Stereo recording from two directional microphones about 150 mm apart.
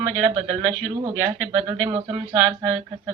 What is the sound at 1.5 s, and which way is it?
Speech, 40° right (ahead or behind).